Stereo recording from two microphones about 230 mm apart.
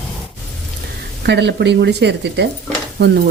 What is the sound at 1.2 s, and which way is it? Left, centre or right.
Speech, right.